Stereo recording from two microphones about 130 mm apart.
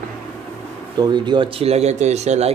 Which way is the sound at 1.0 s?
35° right (ahead or behind).